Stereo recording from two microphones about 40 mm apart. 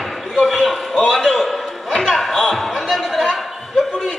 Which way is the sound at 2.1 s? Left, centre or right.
Centre.